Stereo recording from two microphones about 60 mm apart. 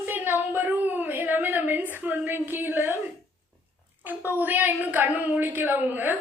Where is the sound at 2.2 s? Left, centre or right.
Right.